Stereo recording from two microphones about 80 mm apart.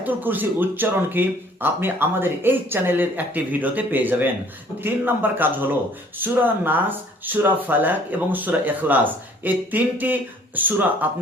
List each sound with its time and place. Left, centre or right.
0.0 s speech: right